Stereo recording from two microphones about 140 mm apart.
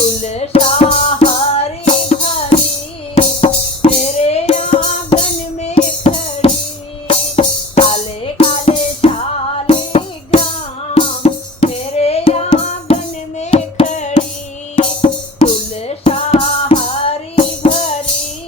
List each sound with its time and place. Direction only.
0.2 s music: 50° left (ahead or behind)
14.8 s music: 40° left (ahead or behind)